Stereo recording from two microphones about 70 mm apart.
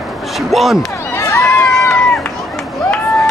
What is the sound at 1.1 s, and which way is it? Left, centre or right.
Crowd, left.